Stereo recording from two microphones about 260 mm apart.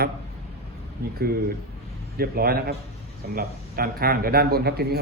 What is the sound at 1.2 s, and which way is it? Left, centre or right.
A man's voice, right.